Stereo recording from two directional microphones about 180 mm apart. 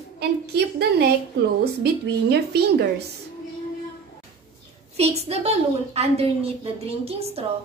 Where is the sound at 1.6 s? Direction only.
65° right (ahead or behind).